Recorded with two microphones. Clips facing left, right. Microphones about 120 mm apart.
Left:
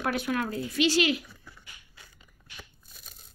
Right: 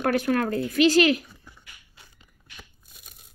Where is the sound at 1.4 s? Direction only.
20° right (ahead or behind).